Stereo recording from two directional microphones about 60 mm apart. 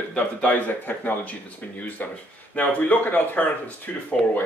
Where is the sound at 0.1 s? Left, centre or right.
Left.